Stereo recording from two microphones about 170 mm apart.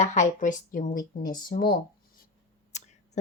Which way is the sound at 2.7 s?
45° left (ahead or behind).